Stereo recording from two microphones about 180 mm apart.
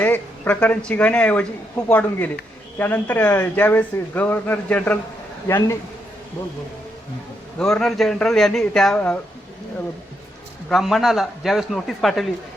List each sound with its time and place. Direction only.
0.0 s speech: 10° left (ahead or behind)
7.6 s a man's voice: 5° left (ahead or behind)
10.7 s a man's voice: centre (ahead or behind)